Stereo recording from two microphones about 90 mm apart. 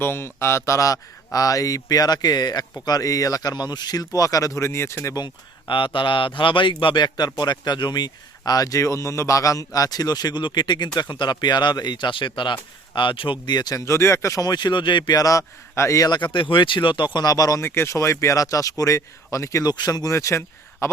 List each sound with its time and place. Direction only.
0.0 s speech: 25° left (ahead or behind)
5.1 s speech: 60° left (ahead or behind)
13.7 s speech: 35° left (ahead or behind); by 15.2 s 55° left (ahead or behind)
15.2 s speech: 40° left (ahead or behind)
16.3 s speech: 65° left (ahead or behind)
17.2 s speech: 45° left (ahead or behind)